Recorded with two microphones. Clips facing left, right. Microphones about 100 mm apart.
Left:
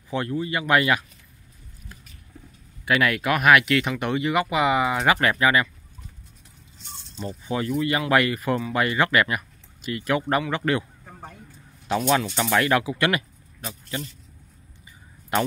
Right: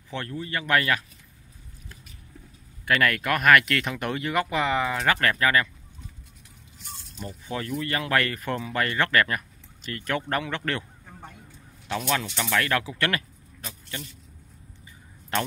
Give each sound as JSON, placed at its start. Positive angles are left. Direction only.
{"t": 0.1, "sound": "speech", "side_deg": 15}
{"t": 2.8, "sound": "speech", "side_deg": 5}
{"t": 7.4, "sound": "speech", "side_deg": 15}
{"t": 12.1, "sound": "speech", "side_deg": 20}
{"t": 13.7, "sound": "speech", "side_deg": 30}
{"t": 15.3, "sound": "speech", "side_deg": 10}